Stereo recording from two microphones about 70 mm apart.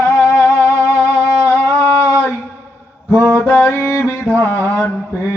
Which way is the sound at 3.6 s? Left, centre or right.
Left.